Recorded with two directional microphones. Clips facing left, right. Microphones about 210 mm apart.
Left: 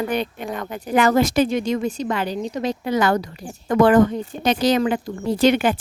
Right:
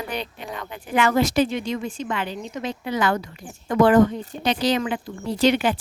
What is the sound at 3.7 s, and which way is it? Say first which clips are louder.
Speech: left 1 dB; 50° left (ahead or behind).